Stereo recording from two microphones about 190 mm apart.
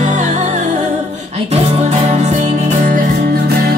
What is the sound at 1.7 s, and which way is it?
Music, 35° right (ahead or behind).